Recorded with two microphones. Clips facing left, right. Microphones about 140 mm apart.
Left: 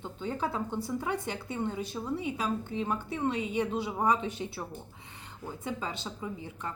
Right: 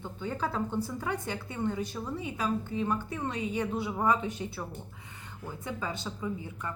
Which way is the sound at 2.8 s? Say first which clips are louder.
Left 1 dB; 10° left (ahead or behind).